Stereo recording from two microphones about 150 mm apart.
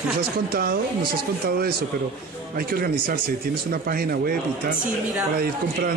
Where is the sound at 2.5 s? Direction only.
75° right (ahead or behind).